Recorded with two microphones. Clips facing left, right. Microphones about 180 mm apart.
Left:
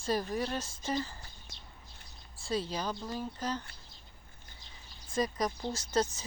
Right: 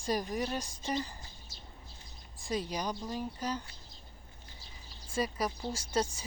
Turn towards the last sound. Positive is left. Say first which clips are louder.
# left 2 dB
turn(degrees=-10)  # may be behind; listen again after turning